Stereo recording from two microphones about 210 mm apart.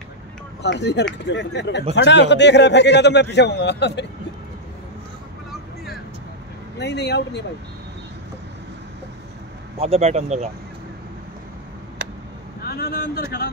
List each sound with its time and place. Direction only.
0.6 s a man's voice: 55° left (ahead or behind)
6.8 s a man's voice: 55° left (ahead or behind)
9.8 s speech: 30° right (ahead or behind)
12.6 s speech: 45° left (ahead or behind)